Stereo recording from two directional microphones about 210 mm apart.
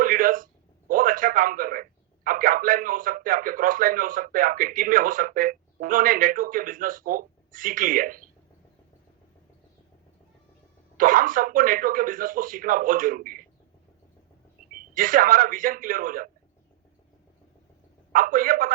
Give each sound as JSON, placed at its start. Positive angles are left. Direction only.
{"t": 0.0, "sound": "a man's voice", "side_deg": -40}
{"t": 10.9, "sound": "speech", "side_deg": -40}
{"t": 14.7, "sound": "speech", "side_deg": -40}
{"t": 18.1, "sound": "speech", "side_deg": -40}